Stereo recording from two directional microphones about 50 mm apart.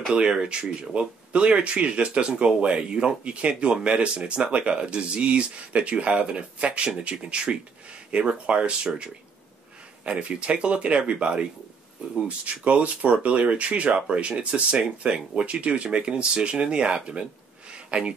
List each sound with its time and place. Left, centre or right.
0.1 s speech: centre